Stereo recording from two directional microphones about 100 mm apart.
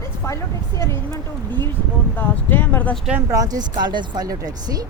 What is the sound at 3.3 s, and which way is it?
Speech, 35° right (ahead or behind).